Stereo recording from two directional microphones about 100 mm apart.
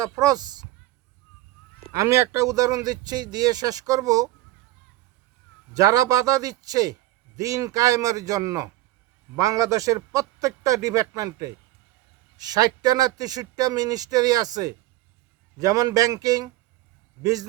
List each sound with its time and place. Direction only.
0.0 s speech: 40° right (ahead or behind)
2.0 s speech: 30° right (ahead or behind)
5.7 s speech: 35° right (ahead or behind)